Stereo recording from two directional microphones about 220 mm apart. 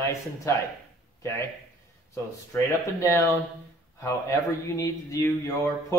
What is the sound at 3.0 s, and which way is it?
Speech, 15° left (ahead or behind).